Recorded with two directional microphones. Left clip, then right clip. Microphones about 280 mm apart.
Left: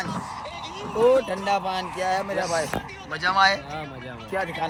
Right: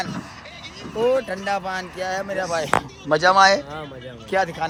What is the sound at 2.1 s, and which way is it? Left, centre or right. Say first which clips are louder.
Speech: even; right.